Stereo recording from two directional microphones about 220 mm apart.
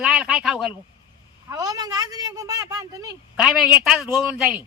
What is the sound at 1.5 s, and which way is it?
Speech, 15° right (ahead or behind).